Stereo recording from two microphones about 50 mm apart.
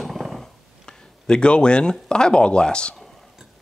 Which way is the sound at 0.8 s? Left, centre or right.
Centre.